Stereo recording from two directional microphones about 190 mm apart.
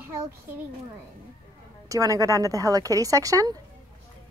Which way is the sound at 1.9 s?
15° right (ahead or behind).